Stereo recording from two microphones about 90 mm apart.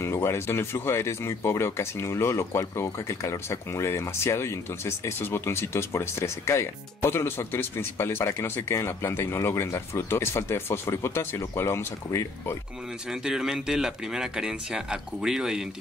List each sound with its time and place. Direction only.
0.0 s speech: 30° left (ahead or behind)
13.1 s speech: 5° right (ahead or behind)